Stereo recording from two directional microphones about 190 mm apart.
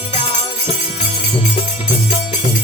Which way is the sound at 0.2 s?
30° left (ahead or behind).